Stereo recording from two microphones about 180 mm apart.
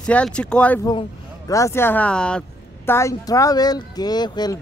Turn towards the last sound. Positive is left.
turn(degrees=20)  # may be behind; listen again after turning